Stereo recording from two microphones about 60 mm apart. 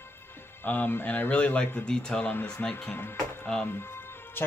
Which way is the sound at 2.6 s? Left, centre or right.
Left.